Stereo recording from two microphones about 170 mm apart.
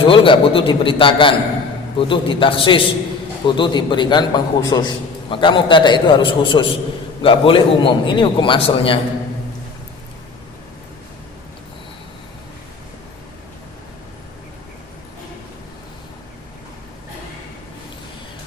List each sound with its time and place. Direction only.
0.0 s a man's voice: 30° left (ahead or behind)